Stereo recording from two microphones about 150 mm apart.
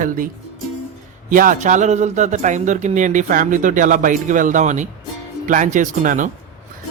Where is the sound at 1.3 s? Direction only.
65° right (ahead or behind).